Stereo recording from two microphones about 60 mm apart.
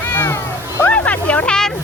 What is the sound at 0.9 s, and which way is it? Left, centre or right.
Music, left.